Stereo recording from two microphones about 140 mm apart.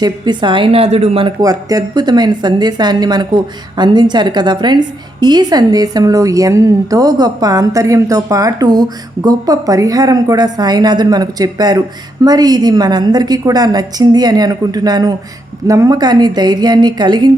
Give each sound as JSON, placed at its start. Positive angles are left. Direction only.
{"t": 0.0, "sound": "a woman's voice", "side_deg": -35}
{"t": 1.4, "sound": "a woman's voice", "side_deg": -25}